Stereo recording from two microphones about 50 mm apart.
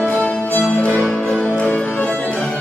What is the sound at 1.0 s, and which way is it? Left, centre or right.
Music, centre.